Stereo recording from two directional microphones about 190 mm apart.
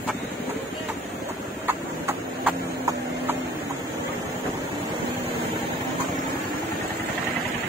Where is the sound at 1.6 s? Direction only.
10° right (ahead or behind).